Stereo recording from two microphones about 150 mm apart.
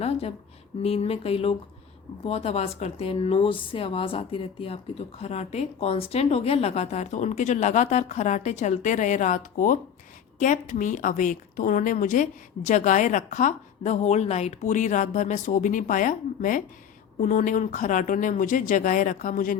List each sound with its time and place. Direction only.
0.0 s a woman's voice: 45° left (ahead or behind); by 19.5 s 65° left (ahead or behind)